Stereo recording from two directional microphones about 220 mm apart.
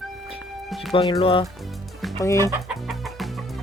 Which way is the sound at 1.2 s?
25° left (ahead or behind).